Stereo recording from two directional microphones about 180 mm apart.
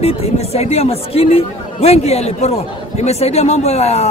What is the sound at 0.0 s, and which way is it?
Speech, 35° left (ahead or behind).